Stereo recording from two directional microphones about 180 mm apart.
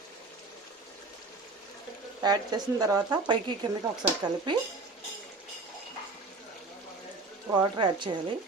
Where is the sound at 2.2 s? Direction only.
20° right (ahead or behind).